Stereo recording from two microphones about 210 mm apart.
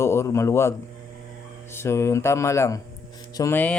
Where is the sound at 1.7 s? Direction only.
15° left (ahead or behind).